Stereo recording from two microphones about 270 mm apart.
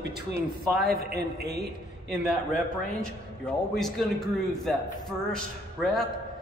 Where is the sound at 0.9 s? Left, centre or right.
Right.